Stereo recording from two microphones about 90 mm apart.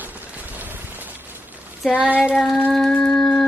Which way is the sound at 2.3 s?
Centre (ahead or behind).